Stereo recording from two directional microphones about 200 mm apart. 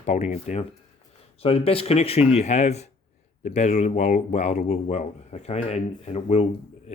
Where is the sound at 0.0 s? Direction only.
35° left (ahead or behind).